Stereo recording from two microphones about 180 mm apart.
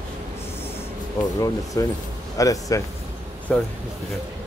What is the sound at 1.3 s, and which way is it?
Speech, 20° left (ahead or behind).